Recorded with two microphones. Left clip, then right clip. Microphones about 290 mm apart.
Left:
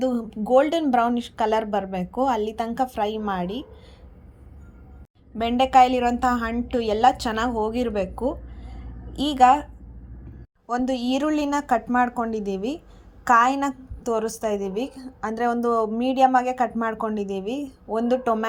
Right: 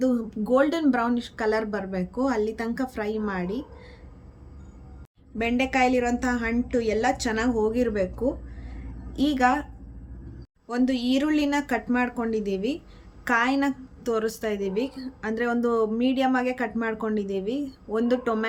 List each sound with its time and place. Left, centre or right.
0.0 s a woman's voice: centre
5.7 s a woman's voice: centre
10.7 s a woman's voice: centre